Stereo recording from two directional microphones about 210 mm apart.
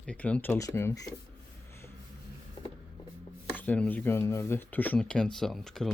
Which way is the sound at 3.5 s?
10° left (ahead or behind).